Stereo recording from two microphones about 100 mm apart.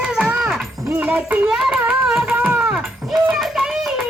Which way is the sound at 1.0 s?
15° right (ahead or behind).